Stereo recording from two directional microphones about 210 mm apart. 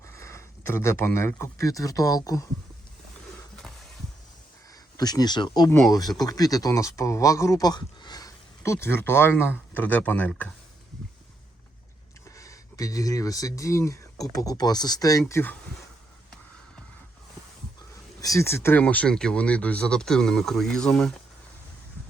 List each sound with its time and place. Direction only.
0.0 s speech: 15° left (ahead or behind)
4.9 s speech: 20° left (ahead or behind)
12.4 s speech: 15° left (ahead or behind)
18.2 s speech: 15° left (ahead or behind)